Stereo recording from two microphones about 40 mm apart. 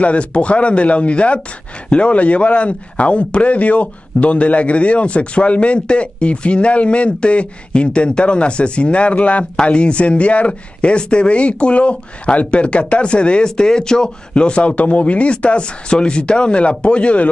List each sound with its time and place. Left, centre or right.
0.0 s speech: left
9.4 s speech: left